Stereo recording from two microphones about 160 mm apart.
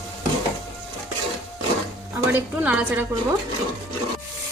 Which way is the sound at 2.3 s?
10° right (ahead or behind).